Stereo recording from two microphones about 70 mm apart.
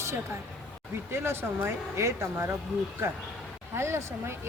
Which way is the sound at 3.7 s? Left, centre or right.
Right.